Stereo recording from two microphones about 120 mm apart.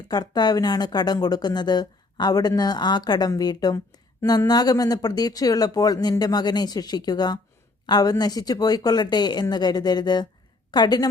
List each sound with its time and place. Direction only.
0.1 s a woman's voice: 35° left (ahead or behind)